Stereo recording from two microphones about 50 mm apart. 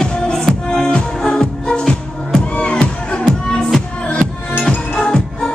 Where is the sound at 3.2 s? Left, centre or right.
Centre.